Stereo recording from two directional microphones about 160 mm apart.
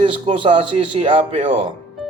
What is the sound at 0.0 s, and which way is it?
Speech, 35° right (ahead or behind).